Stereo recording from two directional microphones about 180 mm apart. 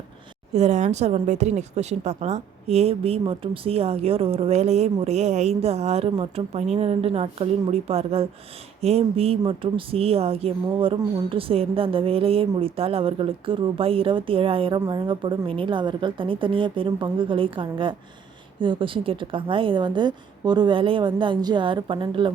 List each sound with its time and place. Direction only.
0.5 s a woman's voice: 40° right (ahead or behind)